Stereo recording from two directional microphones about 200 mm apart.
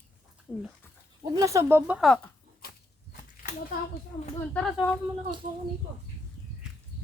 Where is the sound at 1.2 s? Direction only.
15° right (ahead or behind); by 2.3 s 5° left (ahead or behind).